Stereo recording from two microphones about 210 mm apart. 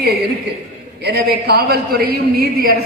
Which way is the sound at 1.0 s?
50° right (ahead or behind).